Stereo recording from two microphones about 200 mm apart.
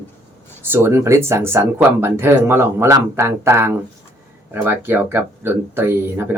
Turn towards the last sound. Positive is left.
turn(degrees=-10)  # may be behind; listen again after turning